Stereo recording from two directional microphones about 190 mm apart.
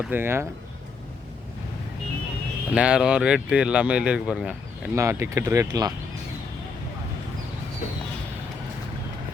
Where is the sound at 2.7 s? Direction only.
5° right (ahead or behind).